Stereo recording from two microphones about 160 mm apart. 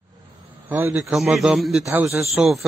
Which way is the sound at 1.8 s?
20° right (ahead or behind).